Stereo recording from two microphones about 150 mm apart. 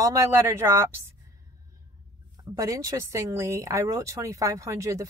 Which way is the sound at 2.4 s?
20° right (ahead or behind).